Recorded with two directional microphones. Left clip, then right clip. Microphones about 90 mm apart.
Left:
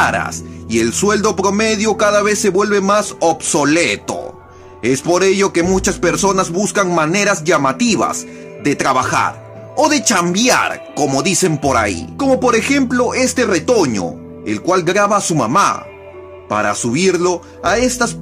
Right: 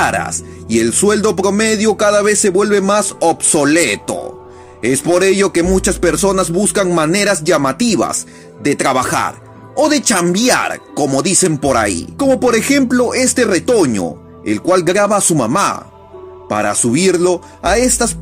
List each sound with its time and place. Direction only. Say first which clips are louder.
0.0 s a man's voice: even; 25° right (ahead or behind)